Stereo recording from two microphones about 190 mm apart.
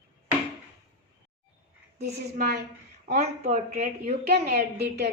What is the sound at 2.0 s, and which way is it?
Speech, 55° right (ahead or behind).